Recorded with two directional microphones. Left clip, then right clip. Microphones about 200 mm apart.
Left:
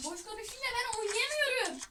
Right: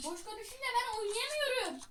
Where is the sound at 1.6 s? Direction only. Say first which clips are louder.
Left 3 dB; 15° right (ahead or behind).